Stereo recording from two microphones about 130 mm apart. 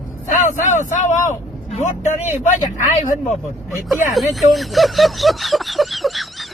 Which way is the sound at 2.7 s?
80° left.